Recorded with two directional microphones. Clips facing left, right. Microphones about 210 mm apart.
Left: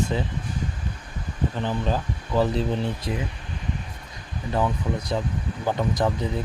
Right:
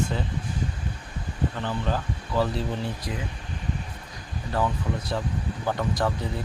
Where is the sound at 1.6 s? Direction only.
15° left (ahead or behind).